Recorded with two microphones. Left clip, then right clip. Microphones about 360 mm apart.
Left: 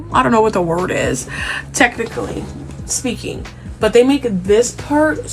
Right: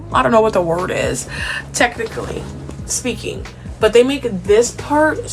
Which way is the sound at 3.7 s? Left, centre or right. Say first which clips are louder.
Even; centre.